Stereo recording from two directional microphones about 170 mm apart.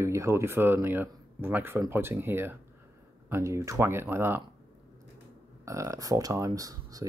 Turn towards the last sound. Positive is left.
turn(degrees=-20)  # may be behind; listen again after turning